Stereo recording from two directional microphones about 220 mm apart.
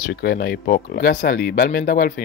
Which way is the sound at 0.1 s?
50° left (ahead or behind).